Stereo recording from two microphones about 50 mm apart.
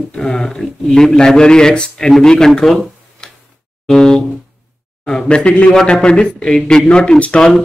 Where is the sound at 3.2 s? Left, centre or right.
Centre.